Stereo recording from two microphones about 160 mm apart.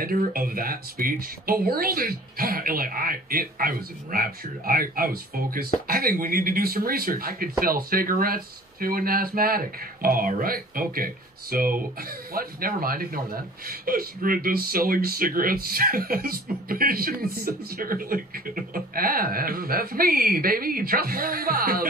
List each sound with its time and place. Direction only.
0.0 s speech: 65° right (ahead or behind)